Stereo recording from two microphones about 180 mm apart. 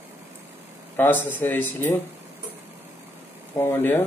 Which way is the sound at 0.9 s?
10° left (ahead or behind).